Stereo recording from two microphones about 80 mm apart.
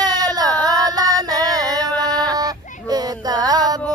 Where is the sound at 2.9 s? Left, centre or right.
Right.